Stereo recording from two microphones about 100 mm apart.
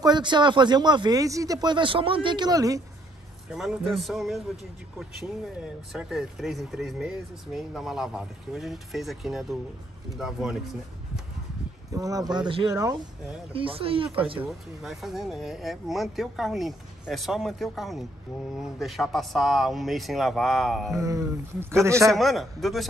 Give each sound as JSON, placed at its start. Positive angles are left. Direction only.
{"t": 0.0, "sound": "speech", "side_deg": -50}
{"t": 1.2, "sound": "speech", "side_deg": -35}
{"t": 3.9, "sound": "speech", "side_deg": 0}
{"t": 5.9, "sound": "speech", "side_deg": -5}
{"t": 11.9, "sound": "speech", "side_deg": -35}
{"t": 13.5, "sound": "speech", "side_deg": -65}
{"t": 14.8, "sound": "speech", "side_deg": -5}
{"t": 20.9, "sound": "a man's voice", "side_deg": -30}
{"t": 22.1, "sound": "speech", "side_deg": 0}